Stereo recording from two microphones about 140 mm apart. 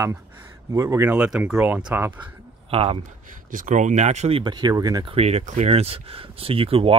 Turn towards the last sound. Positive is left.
turn(degrees=-40)  # may be behind; listen again after turning